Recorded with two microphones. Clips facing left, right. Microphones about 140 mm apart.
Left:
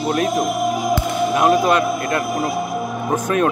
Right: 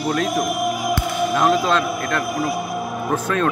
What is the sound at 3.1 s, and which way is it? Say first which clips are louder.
Speech: left 3 dB; 15° left (ahead or behind).